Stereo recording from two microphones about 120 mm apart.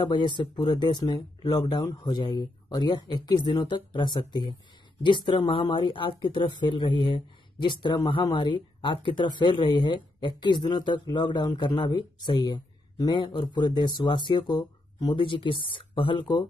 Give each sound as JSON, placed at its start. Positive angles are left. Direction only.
{"t": 0.0, "sound": "speech", "side_deg": 40}